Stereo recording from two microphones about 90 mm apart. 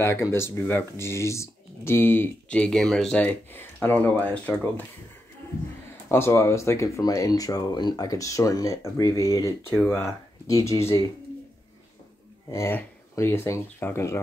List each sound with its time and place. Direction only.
0.0 s speech: 30° left (ahead or behind)
2.5 s speech: 10° left (ahead or behind)
3.3 s speech: 20° left (ahead or behind)
6.0 s speech: 30° left (ahead or behind)
7.1 s speech: 45° left (ahead or behind)
9.8 s speech: 30° left (ahead or behind)
12.4 s speech: 30° left (ahead or behind)